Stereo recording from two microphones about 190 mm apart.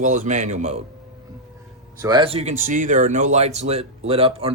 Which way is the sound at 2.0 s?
20° right (ahead or behind).